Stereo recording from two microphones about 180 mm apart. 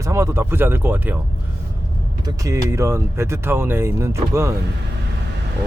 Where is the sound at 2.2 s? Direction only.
20° right (ahead or behind).